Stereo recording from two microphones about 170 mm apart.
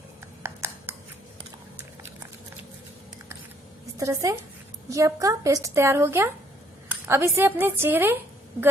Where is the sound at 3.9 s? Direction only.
20° right (ahead or behind).